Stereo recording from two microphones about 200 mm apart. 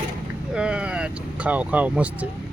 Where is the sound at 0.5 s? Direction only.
5° right (ahead or behind).